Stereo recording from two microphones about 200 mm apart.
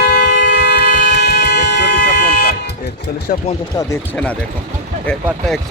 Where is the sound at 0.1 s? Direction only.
55° left (ahead or behind).